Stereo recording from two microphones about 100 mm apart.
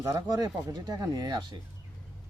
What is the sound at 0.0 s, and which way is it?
Speech, 40° right (ahead or behind).